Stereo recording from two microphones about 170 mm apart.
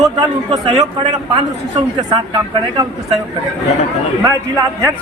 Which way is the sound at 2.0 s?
25° right (ahead or behind).